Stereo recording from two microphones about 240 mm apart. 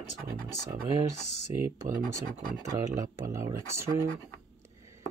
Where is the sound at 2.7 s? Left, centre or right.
Centre.